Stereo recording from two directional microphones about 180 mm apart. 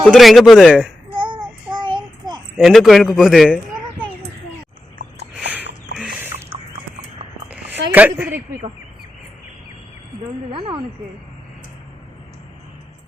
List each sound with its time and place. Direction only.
0.0 s a man's voice: centre (ahead or behind)
1.1 s child singing: 25° right (ahead or behind)
2.6 s speech: centre (ahead or behind)
5.3 s a sound: 10° right (ahead or behind)
7.9 s speech: 10° right (ahead or behind)